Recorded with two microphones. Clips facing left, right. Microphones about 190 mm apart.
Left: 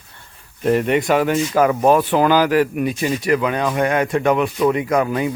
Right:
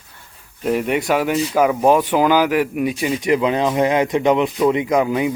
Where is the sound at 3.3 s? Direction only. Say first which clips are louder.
Right 3 dB; 25° right (ahead or behind).